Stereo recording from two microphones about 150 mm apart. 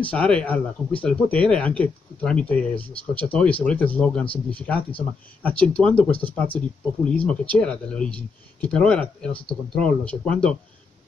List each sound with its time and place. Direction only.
0.0 s speech: 10° left (ahead or behind)